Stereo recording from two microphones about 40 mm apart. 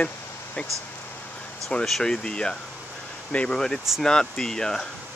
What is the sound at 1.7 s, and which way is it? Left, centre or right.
Speech, left.